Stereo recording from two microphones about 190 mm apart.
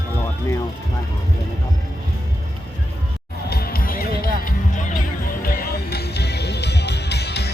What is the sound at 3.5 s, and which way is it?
Music, 50° left (ahead or behind).